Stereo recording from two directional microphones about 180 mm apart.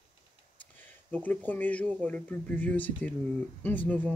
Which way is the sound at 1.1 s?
10° left (ahead or behind).